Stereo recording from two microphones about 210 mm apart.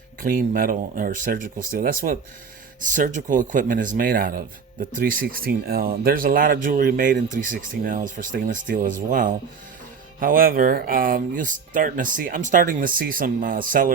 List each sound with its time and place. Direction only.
0.2 s speech: 40° right (ahead or behind)